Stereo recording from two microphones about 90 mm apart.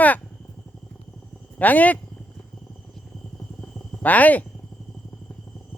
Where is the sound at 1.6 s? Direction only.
20° left (ahead or behind).